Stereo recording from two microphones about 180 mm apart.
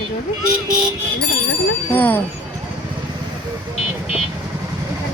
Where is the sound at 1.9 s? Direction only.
10° left (ahead or behind).